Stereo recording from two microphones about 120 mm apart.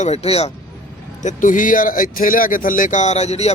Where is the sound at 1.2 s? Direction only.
90° left.